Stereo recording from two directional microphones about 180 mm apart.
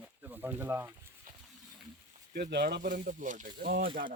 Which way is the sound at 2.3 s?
65° right (ahead or behind).